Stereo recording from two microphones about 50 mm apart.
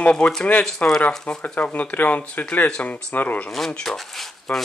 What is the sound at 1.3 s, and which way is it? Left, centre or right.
Speech, left.